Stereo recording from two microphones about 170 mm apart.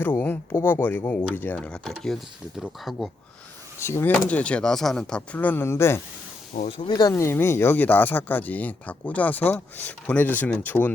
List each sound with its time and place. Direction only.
0.0 s speech: 10° left (ahead or behind)
3.8 s speech: 15° left (ahead or behind)
6.5 s speech: 45° left (ahead or behind)
6.8 s speech: 20° left (ahead or behind)